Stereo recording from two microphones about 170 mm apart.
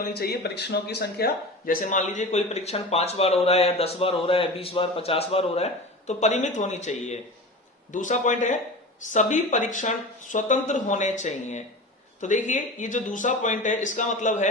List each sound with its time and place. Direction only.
0.1 s speech: 70° left (ahead or behind); by 14.5 s 45° left (ahead or behind)